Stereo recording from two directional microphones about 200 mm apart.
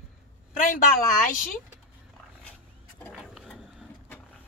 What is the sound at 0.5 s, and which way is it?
Speech, 40° left (ahead or behind).